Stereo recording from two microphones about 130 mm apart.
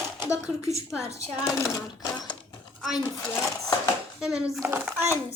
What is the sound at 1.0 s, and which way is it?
Speech, 25° left (ahead or behind).